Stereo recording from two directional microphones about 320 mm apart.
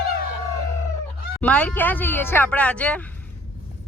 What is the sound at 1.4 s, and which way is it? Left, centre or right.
Speech, centre.